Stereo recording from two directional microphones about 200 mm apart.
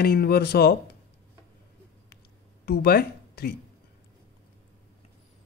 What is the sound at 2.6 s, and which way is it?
Speech, 50° left (ahead or behind).